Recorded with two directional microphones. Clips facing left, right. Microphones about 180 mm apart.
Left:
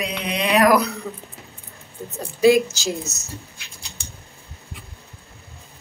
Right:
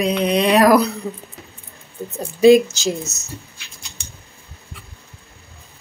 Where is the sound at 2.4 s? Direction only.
20° right (ahead or behind).